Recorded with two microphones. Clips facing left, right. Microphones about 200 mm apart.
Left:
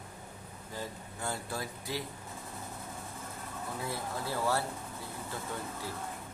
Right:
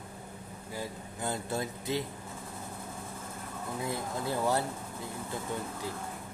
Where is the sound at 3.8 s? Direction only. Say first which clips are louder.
Right 4 dB; 20° right (ahead or behind).